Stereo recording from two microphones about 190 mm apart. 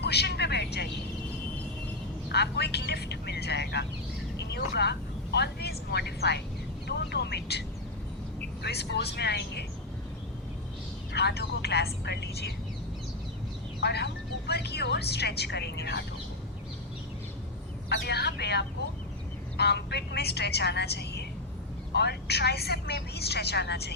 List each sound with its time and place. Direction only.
0.0 s vehicle: 60° left (ahead or behind)
2.3 s vehicle: 60° left (ahead or behind)
6.8 s a sound: 60° left (ahead or behind)
8.6 s vehicle: 60° left (ahead or behind)
11.1 s telephone: 60° left (ahead or behind)
13.8 s music: 60° left (ahead or behind)
17.8 s vehicle: 60° left (ahead or behind)
21.9 s speech: 60° left (ahead or behind)